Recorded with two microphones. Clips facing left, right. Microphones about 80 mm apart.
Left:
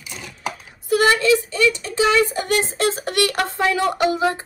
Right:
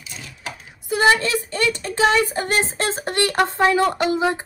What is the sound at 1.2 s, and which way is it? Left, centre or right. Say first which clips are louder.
A woman's voice: left 5 dB; right.